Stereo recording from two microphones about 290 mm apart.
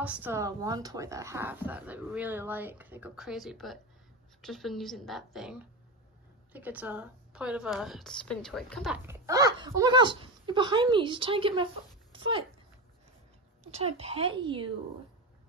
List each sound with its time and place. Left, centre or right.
0.0 s a woman's voice: centre
13.7 s speech: right